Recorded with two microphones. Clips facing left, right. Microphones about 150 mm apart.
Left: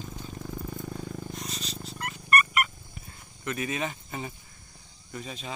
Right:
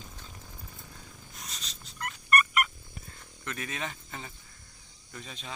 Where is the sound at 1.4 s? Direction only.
Centre (ahead or behind).